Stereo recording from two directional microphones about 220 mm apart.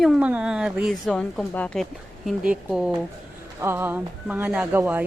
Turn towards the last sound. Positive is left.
turn(degrees=-10)  # may be behind; listen again after turning